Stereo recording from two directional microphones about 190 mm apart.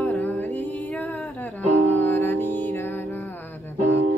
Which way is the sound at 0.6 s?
10° left (ahead or behind).